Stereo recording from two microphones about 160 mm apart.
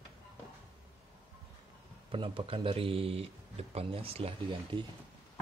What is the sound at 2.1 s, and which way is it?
Speech, 35° right (ahead or behind).